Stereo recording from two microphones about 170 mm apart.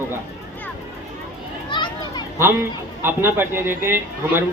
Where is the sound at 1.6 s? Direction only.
25° left (ahead or behind).